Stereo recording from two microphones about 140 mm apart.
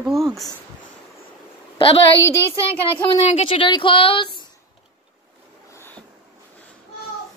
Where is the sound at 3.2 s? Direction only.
40° left (ahead or behind).